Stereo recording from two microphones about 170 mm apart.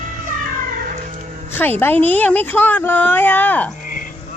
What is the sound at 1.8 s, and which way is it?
Speech, 10° left (ahead or behind).